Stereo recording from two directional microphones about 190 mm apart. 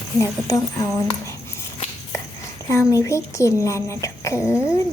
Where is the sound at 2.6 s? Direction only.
15° left (ahead or behind).